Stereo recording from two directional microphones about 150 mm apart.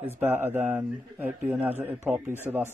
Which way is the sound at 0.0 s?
15° right (ahead or behind).